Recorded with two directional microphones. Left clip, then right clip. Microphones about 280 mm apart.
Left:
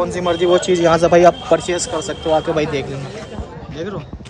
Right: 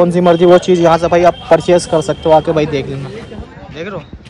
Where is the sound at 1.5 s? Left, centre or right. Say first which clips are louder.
Right 9 dB; right.